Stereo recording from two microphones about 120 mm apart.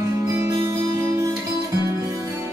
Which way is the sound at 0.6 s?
30° right (ahead or behind).